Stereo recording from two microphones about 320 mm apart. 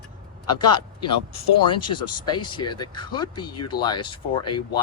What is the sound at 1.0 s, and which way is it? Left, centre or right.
Speech, left.